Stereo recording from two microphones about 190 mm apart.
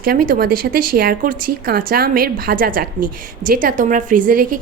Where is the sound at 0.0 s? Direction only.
50° right (ahead or behind).